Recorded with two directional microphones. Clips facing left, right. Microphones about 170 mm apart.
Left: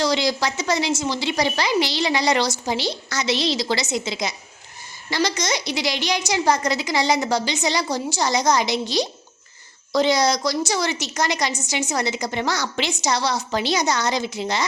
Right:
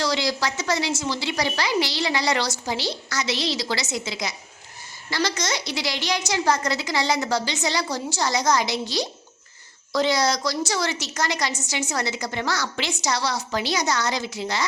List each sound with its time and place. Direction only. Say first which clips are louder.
0.0 s a woman's voice: left 3 dB; 20° left (ahead or behind)